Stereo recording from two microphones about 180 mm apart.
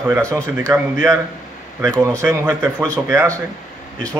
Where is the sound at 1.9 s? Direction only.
20° right (ahead or behind).